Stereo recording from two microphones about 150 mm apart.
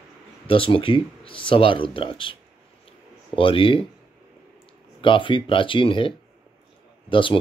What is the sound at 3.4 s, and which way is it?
Speech, 35° left (ahead or behind).